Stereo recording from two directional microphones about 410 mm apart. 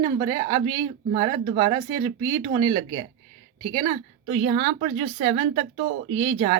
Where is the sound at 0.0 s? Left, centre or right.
Centre.